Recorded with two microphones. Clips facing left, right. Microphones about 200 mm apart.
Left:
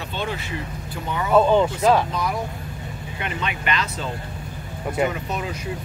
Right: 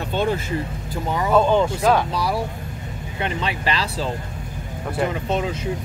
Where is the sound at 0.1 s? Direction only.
45° right (ahead or behind).